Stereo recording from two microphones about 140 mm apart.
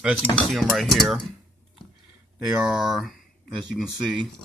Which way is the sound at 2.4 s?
5° right (ahead or behind).